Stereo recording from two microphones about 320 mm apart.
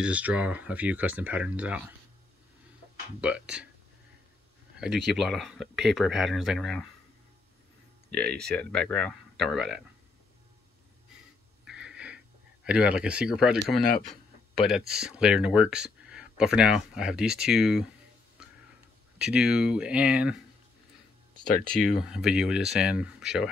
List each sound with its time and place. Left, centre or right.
0.0 s speech: centre
3.2 s speech: centre
4.7 s speech: centre
8.1 s speech: centre
11.6 s a sound: centre
12.6 s speech: centre
19.1 s speech: centre
21.7 s speech: centre